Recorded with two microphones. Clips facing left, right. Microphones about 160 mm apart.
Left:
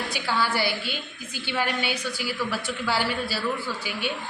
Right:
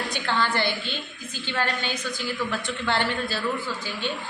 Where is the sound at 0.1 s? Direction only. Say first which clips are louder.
Even; 5° left (ahead or behind).